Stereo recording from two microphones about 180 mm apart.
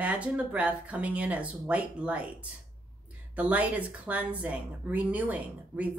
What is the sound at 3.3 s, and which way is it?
Speech, 10° right (ahead or behind).